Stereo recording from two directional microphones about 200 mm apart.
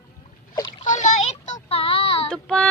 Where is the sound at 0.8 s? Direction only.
40° left (ahead or behind).